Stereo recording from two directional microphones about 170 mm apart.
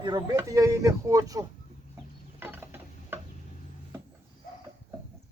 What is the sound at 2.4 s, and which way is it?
Stir, 10° right (ahead or behind).